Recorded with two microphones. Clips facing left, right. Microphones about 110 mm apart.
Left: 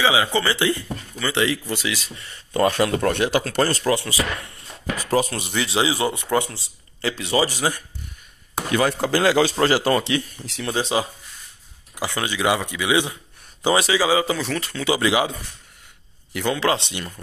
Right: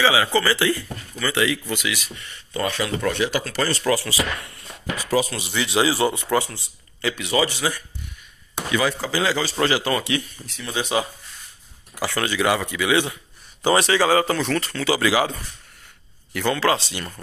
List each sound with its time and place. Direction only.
0.0 s speech: 20° left (ahead or behind)
2.5 s speech: 45° left (ahead or behind)
3.8 s speech: 25° left (ahead or behind)
4.9 s speech: 45° left (ahead or behind)
5.8 s speech: 20° left (ahead or behind); by 7.8 s 45° left (ahead or behind)
8.5 s chop: 45° left (ahead or behind)
9.0 s a man's voice: 55° left (ahead or behind)
9.7 s speech: 35° left (ahead or behind)
10.4 s speech: 80° left
10.7 s speech: 30° left (ahead or behind)
11.9 s a man's voice: 15° left (ahead or behind)
13.8 s speech: 10° left (ahead or behind)
16.3 s speech: 20° left (ahead or behind)